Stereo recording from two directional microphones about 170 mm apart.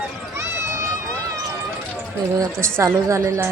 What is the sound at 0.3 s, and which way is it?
Run, 15° right (ahead or behind).